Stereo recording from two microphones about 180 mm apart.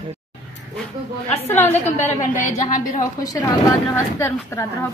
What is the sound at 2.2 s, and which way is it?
Speech, 45° left (ahead or behind).